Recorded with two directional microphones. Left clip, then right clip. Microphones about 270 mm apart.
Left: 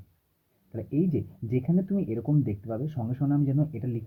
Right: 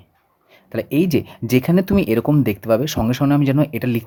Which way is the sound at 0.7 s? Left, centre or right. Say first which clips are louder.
Right 11 dB; right.